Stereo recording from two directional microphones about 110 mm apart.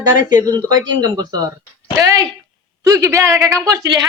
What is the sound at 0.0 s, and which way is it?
A woman's voice, 35° right (ahead or behind).